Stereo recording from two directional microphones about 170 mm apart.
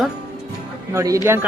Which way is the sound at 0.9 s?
20° right (ahead or behind).